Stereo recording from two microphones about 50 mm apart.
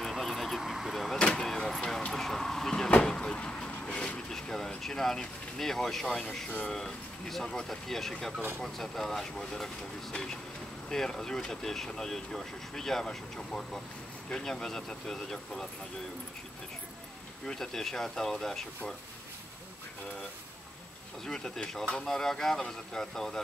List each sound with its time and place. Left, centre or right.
0.0 s vehicle: centre
1.1 s vehicle: centre
2.1 s a sound: centre
3.1 s vehicle: centre
3.8 s a sound: left
6.7 s speech: centre
17.6 s speech: centre
21.3 s speech: centre